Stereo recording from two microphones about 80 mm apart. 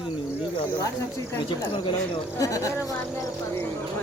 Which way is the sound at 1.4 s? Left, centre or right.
Left.